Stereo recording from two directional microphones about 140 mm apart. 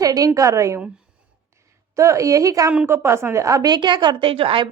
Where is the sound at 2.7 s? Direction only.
10° right (ahead or behind).